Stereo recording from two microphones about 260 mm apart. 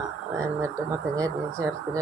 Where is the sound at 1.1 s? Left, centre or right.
Centre.